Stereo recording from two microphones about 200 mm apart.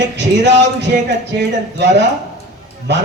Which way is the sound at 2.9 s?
60° right (ahead or behind).